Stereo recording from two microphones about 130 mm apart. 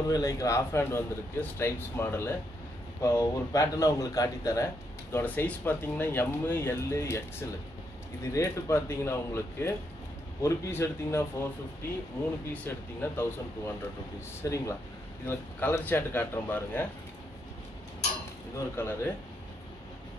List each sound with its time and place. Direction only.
0.1 s speech: 25° left (ahead or behind)
5.1 s speech: 15° left (ahead or behind)
8.2 s speech: 25° left (ahead or behind)
12.6 s speech: 15° left (ahead or behind)
18.8 s speech: 20° left (ahead or behind)